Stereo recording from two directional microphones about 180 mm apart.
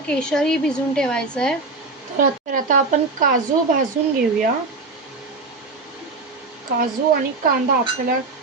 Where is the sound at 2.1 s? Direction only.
50° right (ahead or behind).